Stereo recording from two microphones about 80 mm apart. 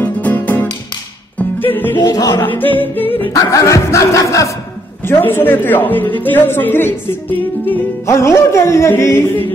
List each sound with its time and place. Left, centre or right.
0.0 s music: centre
2.0 s music: left
2.3 s speech: left
3.4 s music: left
5.0 s speech: left
8.1 s music: left